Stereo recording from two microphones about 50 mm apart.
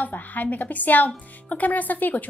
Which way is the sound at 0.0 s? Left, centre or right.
Left.